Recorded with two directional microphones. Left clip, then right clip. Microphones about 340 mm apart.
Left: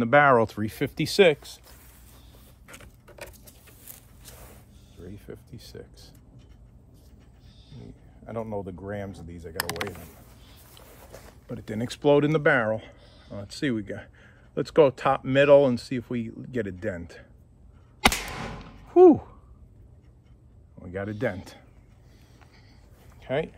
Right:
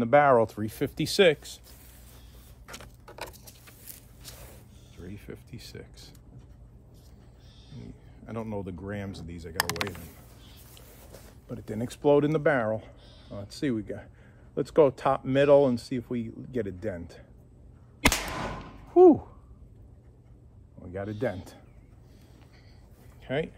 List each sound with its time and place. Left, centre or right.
0.0 s speech: left
2.6 s keys jangling: centre
4.9 s a sound: centre
8.3 s speech: centre
10.7 s speech: centre
18.9 s a sound: left
20.8 s a man's voice: left
23.2 s speech: centre